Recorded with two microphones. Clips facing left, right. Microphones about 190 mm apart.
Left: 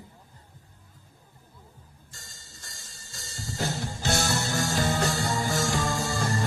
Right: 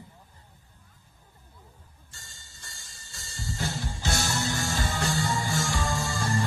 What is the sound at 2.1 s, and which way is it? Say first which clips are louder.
Music: left 2 dB; 40° left (ahead or behind).